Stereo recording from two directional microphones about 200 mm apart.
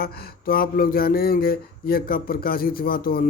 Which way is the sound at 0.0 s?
45° left (ahead or behind).